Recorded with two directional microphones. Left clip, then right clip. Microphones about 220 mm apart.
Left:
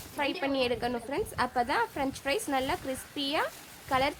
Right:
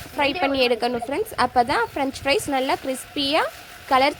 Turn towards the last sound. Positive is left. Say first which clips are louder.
# right 10 dB
turn(degrees=-20)  # may be behind; listen again after turning